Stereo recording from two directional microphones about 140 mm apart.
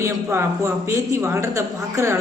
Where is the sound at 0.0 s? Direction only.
20° right (ahead or behind).